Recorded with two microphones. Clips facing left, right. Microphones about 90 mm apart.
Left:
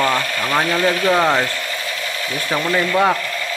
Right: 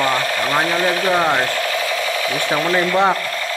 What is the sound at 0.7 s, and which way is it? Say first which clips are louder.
Speech: left 1 dB; 20° right (ahead or behind).